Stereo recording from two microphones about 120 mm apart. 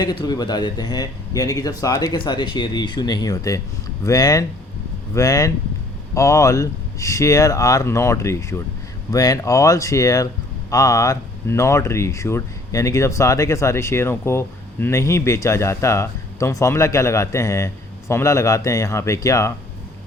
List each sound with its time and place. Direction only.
0.0 s a man's voice: 35° left (ahead or behind)